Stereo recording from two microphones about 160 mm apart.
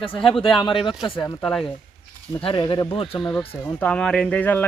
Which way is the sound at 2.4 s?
30° left (ahead or behind).